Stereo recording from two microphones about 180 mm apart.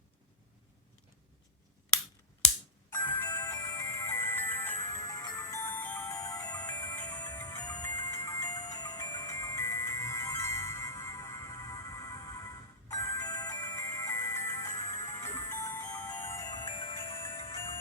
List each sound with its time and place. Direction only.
2.9 s music: 10° left (ahead or behind)